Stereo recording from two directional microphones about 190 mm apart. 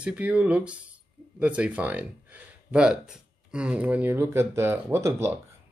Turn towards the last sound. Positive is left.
turn(degrees=-15)  # may be behind; listen again after turning